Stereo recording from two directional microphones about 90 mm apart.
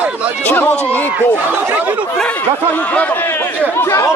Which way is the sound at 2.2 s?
15° left (ahead or behind).